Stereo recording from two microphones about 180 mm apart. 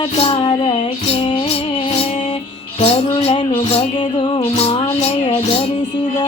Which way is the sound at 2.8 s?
35° left (ahead or behind).